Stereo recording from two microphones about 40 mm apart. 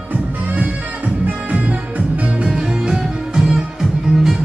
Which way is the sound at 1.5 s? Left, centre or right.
Right.